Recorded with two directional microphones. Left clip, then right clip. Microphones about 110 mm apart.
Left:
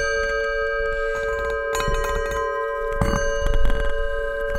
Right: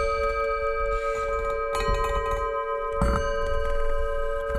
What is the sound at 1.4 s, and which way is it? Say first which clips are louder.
Bell: left 3 dB; 90° left.